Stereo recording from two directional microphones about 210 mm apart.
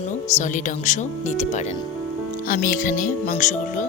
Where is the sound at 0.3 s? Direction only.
35° left (ahead or behind).